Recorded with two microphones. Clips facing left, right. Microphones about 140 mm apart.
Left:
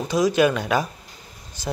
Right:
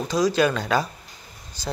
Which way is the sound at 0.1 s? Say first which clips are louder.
Left 2 dB; 20° left (ahead or behind).